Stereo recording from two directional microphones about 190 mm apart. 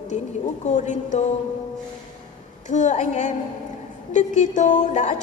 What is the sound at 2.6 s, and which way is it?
A woman's voice, 40° left (ahead or behind).